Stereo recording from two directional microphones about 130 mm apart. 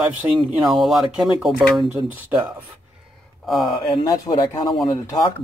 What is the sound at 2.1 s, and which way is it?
Speech, 15° right (ahead or behind).